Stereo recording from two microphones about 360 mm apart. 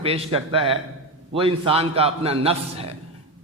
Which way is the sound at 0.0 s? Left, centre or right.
Centre.